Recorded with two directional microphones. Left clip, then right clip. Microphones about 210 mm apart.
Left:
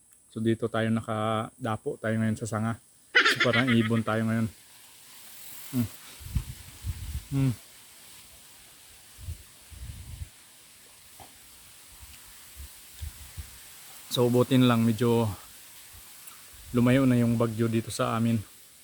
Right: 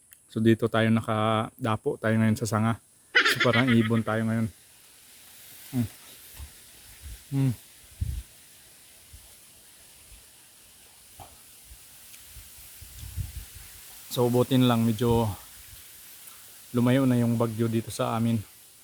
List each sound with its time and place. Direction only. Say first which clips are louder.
0.3 s speech: right 4 dB; 50° right (ahead or behind)
3.1 s speech: even; centre (ahead or behind)
5.7 s speech: even; centre (ahead or behind)
14.1 s speech: even; centre (ahead or behind)
16.7 s speech: even; centre (ahead or behind)